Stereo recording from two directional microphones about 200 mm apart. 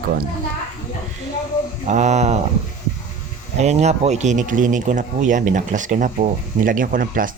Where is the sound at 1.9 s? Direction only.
35° right (ahead or behind).